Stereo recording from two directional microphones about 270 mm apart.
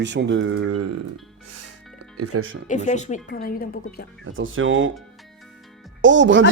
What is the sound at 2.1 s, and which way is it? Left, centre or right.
Speech, right.